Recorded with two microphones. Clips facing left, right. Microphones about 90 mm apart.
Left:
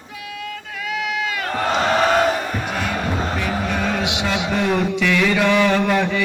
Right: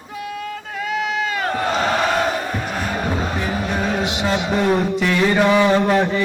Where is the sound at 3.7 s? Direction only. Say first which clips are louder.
Right 1 dB; 35° right (ahead or behind).